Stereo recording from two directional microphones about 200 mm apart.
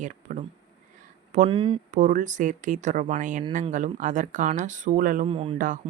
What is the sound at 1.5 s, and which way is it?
Speech, 25° right (ahead or behind).